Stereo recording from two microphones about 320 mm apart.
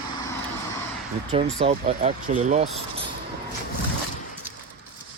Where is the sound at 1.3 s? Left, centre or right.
Centre.